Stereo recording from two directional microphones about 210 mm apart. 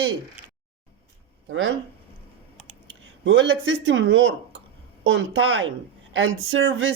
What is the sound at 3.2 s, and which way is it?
Speech, 65° right (ahead or behind).